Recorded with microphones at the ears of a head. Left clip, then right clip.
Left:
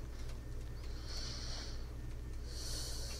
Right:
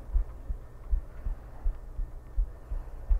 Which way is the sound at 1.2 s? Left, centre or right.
Left.